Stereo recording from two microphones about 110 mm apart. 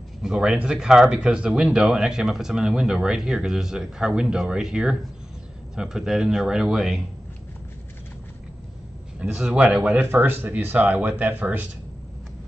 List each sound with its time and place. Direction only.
0.2 s speech: 5° right (ahead or behind)
9.2 s speech: 10° right (ahead or behind)
9.9 s speech: 20° right (ahead or behind)